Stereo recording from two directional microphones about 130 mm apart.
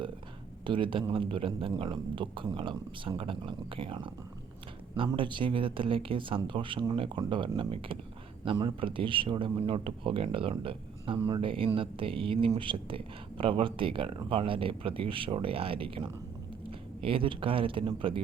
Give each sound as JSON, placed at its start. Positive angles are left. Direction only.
{"t": 0.6, "sound": "speech", "side_deg": -40}
{"t": 5.1, "sound": "speech", "side_deg": -40}